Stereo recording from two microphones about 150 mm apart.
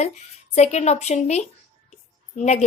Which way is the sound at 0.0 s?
50° left (ahead or behind).